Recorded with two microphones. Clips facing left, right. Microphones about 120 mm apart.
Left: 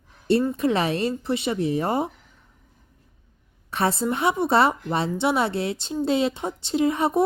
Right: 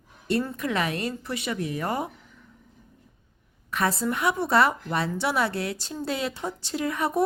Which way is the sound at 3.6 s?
30° left (ahead or behind).